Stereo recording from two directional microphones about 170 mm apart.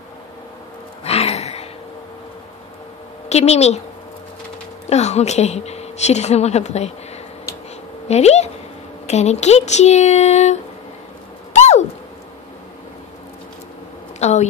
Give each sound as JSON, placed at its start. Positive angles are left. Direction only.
{"t": 1.0, "sound": "a sound", "side_deg": 35}
{"t": 3.3, "sound": "a woman's voice", "side_deg": 40}
{"t": 4.8, "sound": "a woman's voice", "side_deg": 40}
{"t": 8.1, "sound": "a woman's voice", "side_deg": 40}
{"t": 11.5, "sound": "a sound", "side_deg": 40}
{"t": 14.2, "sound": "a woman's voice", "side_deg": 40}